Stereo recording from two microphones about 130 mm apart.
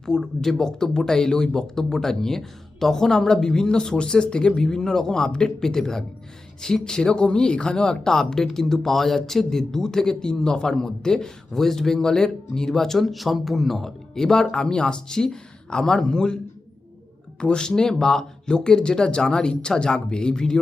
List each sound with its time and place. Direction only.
0.0 s speech: 5° left (ahead or behind)
17.4 s speech: 5° left (ahead or behind)